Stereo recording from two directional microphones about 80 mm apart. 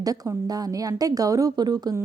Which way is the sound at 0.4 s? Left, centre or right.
Right.